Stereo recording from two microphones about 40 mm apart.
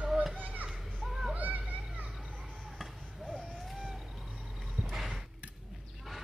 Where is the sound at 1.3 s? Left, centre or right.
Right.